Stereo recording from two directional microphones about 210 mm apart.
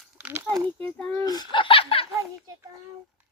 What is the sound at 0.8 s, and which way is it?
Speech, 10° left (ahead or behind).